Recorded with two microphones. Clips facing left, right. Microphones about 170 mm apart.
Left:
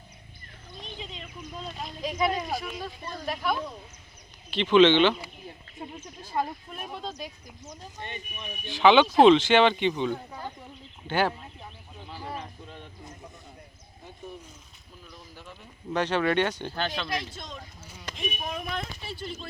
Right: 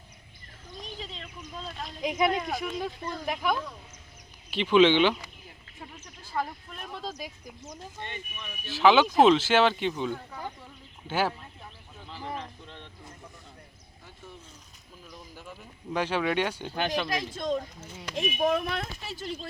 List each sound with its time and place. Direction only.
0.9 s a sound: 35° right (ahead or behind)
1.2 s speech: 10° left (ahead or behind)
2.0 s speech: 20° right (ahead or behind)
4.5 s speech: 10° right (ahead or behind)
5.8 s speech: 25° left (ahead or behind)
6.9 s speech: 5° right (ahead or behind)
8.0 s speech: 20° left (ahead or behind)
8.6 s speech: 5° right (ahead or behind)
11.1 s speech: 5° right (ahead or behind)
12.0 s speech: 10° left (ahead or behind)
15.4 s speech: 10° right (ahead or behind)
17.3 s speech: 50° right (ahead or behind)
18.1 s speech: 85° right
19.1 s speech: 35° right (ahead or behind)